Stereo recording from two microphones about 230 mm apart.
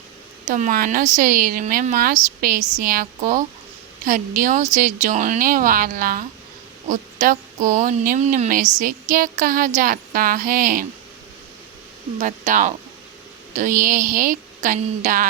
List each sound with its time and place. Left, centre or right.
0.4 s speech: right
12.2 s speech: right